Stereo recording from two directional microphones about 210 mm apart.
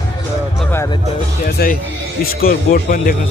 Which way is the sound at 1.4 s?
45° left (ahead or behind).